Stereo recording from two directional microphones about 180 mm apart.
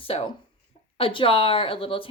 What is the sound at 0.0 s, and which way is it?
A woman's voice, 30° left (ahead or behind).